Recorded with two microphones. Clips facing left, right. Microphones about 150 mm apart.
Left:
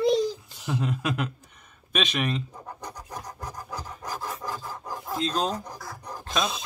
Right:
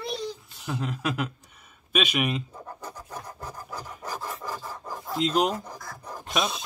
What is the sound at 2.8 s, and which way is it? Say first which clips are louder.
Filing: left 2 dB; 15° left (ahead or behind).